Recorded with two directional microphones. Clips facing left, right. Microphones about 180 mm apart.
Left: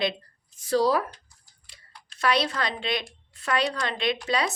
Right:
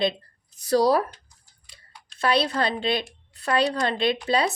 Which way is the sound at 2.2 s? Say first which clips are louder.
Right 3 dB; 30° right (ahead or behind).